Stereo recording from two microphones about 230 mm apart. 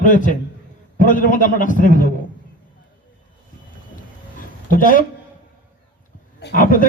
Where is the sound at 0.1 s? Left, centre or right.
Left.